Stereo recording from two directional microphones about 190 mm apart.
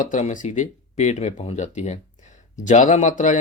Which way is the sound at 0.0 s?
40° left (ahead or behind).